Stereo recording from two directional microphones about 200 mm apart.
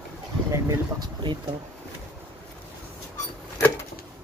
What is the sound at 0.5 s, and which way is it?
Speech, 15° right (ahead or behind).